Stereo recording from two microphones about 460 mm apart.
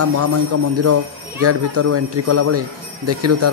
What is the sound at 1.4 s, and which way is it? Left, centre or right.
A man's voice, right.